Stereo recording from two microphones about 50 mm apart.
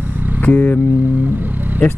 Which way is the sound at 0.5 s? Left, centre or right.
Left.